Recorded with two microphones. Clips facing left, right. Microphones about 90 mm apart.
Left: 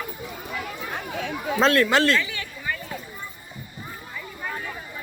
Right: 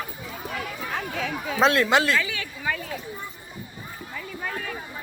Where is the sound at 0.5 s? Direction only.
90° right.